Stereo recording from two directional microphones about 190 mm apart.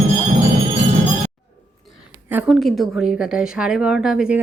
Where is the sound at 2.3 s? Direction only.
5° right (ahead or behind).